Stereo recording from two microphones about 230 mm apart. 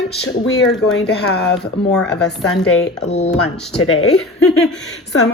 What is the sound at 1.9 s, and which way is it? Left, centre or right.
A woman's voice, centre.